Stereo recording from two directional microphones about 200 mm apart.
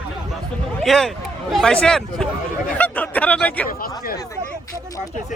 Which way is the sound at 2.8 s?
5° left (ahead or behind).